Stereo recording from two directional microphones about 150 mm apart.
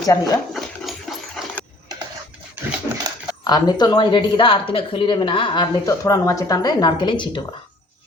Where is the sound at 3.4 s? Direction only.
30° left (ahead or behind).